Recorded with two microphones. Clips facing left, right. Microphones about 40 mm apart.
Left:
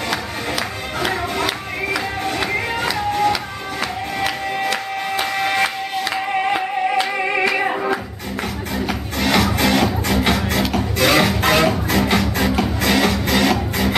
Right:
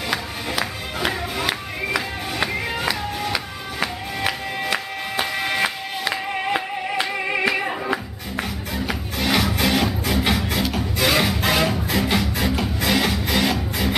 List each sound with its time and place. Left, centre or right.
0.1 s music: centre
6.1 s music: centre
7.1 s singing: centre
7.5 s music: centre
7.9 s music: centre